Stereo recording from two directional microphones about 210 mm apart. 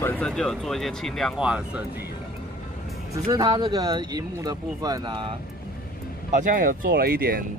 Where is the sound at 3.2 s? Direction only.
20° right (ahead or behind).